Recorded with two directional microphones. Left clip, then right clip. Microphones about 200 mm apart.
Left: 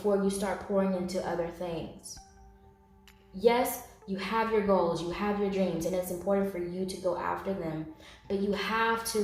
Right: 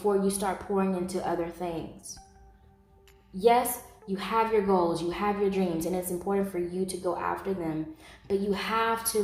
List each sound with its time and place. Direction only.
0.0 s a woman's voice: 40° right (ahead or behind)
3.3 s a woman's voice: 45° right (ahead or behind)